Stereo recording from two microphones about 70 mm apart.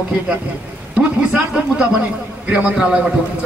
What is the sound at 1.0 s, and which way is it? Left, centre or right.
A man's voice, centre.